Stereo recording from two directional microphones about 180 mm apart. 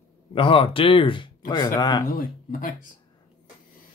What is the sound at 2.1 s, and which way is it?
Speech, 50° left (ahead or behind).